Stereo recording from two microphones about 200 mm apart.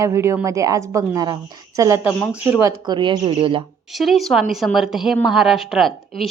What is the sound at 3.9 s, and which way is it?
A woman's voice, centre (ahead or behind).